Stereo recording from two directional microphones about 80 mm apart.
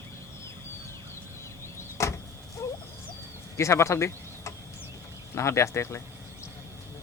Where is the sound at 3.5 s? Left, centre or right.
Left.